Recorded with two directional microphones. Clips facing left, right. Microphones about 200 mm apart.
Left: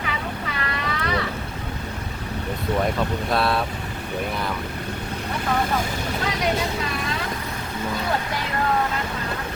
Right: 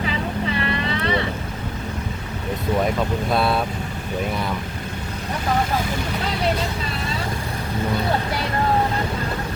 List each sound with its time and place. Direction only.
0.6 s boat: 25° right (ahead or behind)
3.2 s speech: centre (ahead or behind)